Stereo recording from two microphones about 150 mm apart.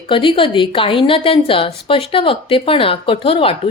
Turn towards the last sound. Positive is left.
turn(degrees=35)  # may be behind; listen again after turning